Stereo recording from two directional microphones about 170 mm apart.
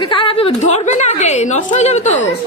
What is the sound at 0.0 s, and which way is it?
A woman's voice, 30° left (ahead or behind).